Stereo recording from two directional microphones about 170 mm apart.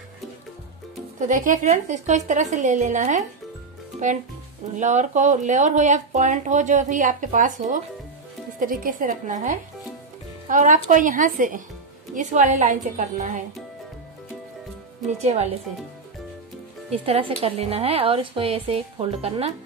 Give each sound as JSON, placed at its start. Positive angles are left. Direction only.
{"t": 1.2, "sound": "speech", "side_deg": -50}
{"t": 4.7, "sound": "speech", "side_deg": -45}
{"t": 15.2, "sound": "a woman's voice", "side_deg": -40}
{"t": 17.0, "sound": "a woman's voice", "side_deg": -35}